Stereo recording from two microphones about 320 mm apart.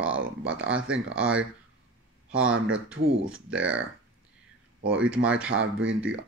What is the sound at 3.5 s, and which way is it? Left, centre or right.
Speech, centre.